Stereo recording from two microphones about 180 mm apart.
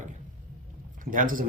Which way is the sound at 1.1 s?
50° right (ahead or behind).